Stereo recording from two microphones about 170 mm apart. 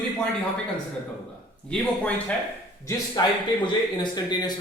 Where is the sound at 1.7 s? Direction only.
10° left (ahead or behind).